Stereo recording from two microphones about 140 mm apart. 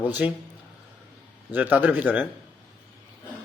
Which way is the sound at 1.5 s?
10° right (ahead or behind).